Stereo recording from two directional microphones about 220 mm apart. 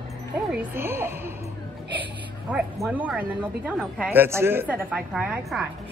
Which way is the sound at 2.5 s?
5° right (ahead or behind).